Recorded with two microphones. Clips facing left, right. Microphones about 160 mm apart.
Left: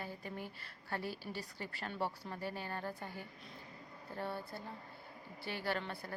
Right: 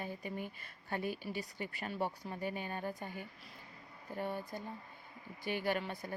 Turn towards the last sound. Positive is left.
turn(degrees=-15)  # may be behind; listen again after turning